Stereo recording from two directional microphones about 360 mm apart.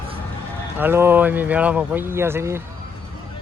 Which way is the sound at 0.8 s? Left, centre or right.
Centre.